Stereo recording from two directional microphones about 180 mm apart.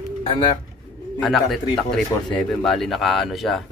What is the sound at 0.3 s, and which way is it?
Speech, 25° left (ahead or behind).